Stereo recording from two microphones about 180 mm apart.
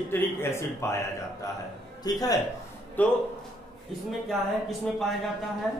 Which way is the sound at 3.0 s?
10° left (ahead or behind).